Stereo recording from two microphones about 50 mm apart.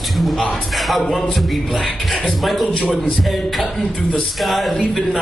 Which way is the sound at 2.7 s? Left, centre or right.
Centre.